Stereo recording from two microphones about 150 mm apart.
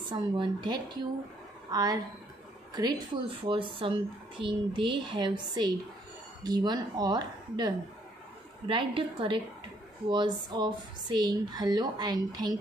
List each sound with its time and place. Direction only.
0.1 s speech: 30° right (ahead or behind)